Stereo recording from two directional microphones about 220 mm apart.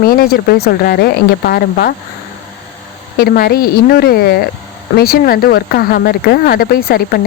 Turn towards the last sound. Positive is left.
turn(degrees=45)  # may be behind; listen again after turning